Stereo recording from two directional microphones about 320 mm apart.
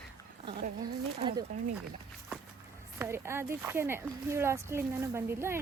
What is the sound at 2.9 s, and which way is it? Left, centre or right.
Speech, centre.